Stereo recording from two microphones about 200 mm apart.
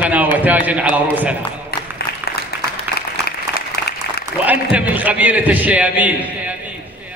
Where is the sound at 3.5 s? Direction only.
50° left (ahead or behind).